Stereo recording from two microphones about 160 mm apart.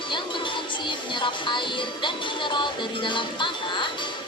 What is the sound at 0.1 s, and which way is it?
Speech, 30° left (ahead or behind).